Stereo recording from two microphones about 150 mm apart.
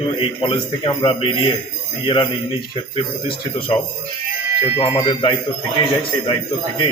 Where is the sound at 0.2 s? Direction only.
35° left (ahead or behind).